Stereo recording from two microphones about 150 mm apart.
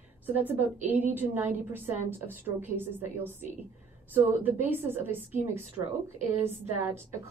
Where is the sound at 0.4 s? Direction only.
10° right (ahead or behind).